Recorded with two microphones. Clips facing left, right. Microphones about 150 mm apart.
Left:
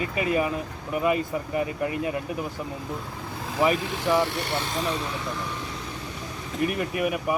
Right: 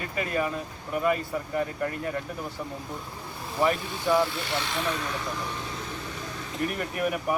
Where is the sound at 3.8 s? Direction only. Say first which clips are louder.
Left 1 dB; 90° left.